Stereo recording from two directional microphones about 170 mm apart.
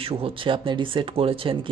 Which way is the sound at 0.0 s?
30° right (ahead or behind).